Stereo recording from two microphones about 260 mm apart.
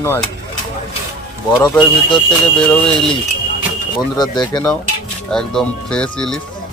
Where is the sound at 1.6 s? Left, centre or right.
Centre.